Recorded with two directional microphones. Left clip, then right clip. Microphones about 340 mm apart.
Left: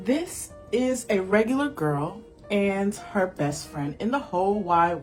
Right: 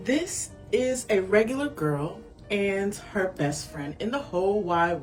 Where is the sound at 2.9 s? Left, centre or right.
Centre.